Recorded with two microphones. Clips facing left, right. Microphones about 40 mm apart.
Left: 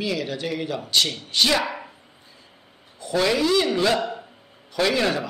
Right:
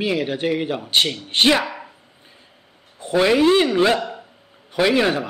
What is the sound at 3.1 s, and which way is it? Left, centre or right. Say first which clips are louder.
Speech: right 5 dB; right.